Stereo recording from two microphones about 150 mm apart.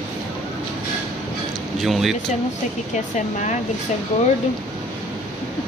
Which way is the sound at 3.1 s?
55° left (ahead or behind).